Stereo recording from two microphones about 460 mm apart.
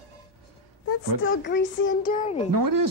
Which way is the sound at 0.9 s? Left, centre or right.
Left.